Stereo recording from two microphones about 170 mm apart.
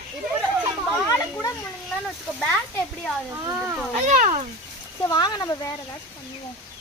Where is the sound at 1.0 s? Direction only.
15° left (ahead or behind).